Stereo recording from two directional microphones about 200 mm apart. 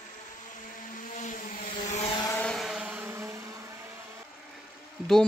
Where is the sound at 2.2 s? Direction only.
10° left (ahead or behind); by 3.3 s 10° right (ahead or behind).